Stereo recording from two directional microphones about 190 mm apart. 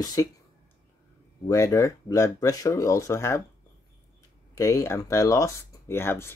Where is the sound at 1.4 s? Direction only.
20° left (ahead or behind).